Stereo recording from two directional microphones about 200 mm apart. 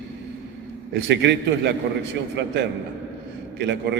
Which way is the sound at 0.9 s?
60° right (ahead or behind).